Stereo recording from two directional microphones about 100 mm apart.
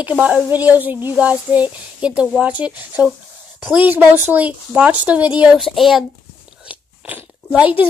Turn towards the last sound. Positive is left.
turn(degrees=-15)  # may be behind; listen again after turning